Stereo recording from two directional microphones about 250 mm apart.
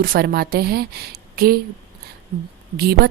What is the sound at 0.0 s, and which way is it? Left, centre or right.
A woman's voice, right.